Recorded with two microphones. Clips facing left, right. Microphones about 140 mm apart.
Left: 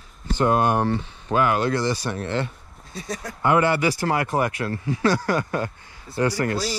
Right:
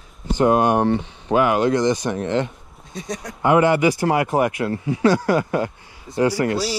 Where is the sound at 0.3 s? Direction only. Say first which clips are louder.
Right 4 dB; 15° right (ahead or behind).